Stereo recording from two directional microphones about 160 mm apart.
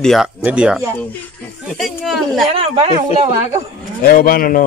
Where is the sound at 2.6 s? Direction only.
35° right (ahead or behind).